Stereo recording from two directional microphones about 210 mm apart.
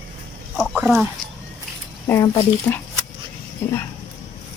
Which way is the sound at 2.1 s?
15° left (ahead or behind).